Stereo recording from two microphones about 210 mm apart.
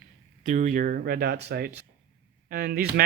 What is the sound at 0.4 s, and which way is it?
Speech, 35° right (ahead or behind).